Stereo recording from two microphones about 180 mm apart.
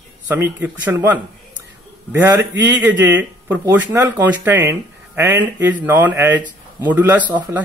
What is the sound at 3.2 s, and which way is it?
Speech, 10° right (ahead or behind).